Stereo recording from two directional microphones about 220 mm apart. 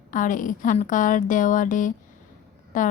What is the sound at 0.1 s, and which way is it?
A woman's voice, 35° left (ahead or behind).